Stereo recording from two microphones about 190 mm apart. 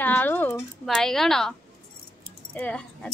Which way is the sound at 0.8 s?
Centre (ahead or behind).